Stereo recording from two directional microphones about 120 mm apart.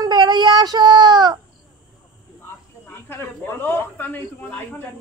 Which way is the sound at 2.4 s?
20° left (ahead or behind).